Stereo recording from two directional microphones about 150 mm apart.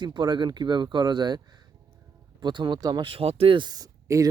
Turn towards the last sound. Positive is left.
turn(degrees=-25)  # may be behind; listen again after turning